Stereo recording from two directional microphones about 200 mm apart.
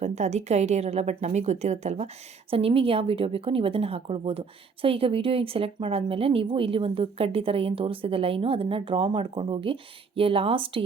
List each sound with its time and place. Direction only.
0.0 s a woman's voice: 35° right (ahead or behind)